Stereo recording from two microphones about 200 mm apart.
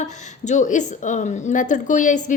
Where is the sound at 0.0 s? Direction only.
35° left (ahead or behind).